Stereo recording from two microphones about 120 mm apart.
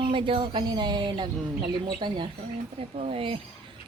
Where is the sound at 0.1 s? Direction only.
45° right (ahead or behind).